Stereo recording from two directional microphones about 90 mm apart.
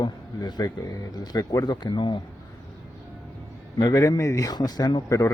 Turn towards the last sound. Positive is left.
turn(degrees=35)  # may be behind; listen again after turning